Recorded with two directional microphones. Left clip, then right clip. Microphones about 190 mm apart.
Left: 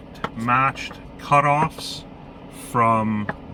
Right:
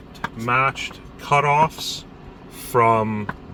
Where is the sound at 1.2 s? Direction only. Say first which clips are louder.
Right 1 dB; 20° right (ahead or behind).